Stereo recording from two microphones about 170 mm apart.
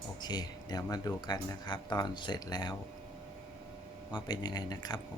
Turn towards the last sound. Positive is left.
turn(degrees=25)  # may be behind; listen again after turning